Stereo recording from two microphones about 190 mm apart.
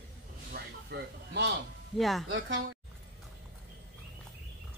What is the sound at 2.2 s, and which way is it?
Speech, 75° right (ahead or behind).